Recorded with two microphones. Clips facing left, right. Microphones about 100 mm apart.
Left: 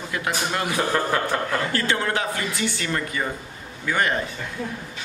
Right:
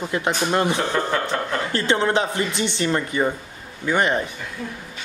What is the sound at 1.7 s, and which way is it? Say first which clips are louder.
Speech: right 8 dB; 25° right (ahead or behind).